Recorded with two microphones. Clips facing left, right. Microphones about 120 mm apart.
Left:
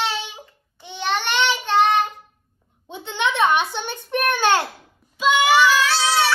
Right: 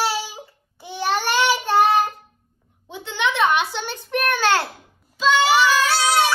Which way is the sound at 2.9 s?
20° left (ahead or behind).